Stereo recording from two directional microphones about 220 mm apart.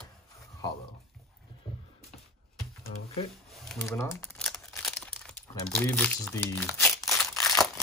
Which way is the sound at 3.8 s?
10° left (ahead or behind).